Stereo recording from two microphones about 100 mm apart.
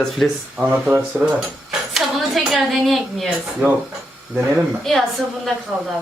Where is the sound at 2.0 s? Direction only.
Centre (ahead or behind).